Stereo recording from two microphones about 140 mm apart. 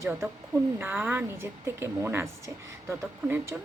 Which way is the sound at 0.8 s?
15° right (ahead or behind).